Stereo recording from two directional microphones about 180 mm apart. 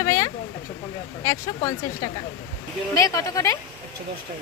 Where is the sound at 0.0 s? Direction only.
15° left (ahead or behind).